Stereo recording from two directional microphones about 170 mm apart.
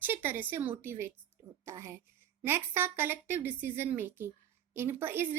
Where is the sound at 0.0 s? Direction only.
10° right (ahead or behind).